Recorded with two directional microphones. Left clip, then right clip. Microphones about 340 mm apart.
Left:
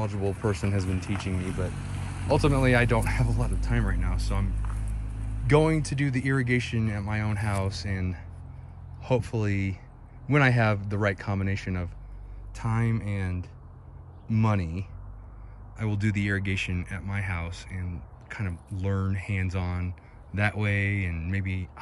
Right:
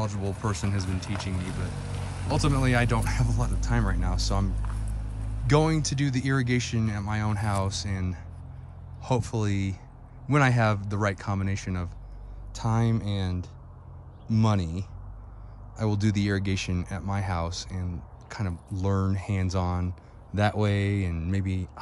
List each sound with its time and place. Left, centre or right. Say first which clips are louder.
0.0 s speech: left 2 dB; centre
1.3 s speech: left 2 dB; right
2.2 s speech: left 4 dB; centre